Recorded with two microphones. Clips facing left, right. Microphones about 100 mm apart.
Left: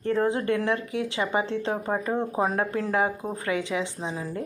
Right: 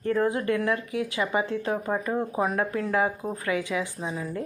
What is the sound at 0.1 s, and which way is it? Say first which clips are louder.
Speech: even; 25° left (ahead or behind).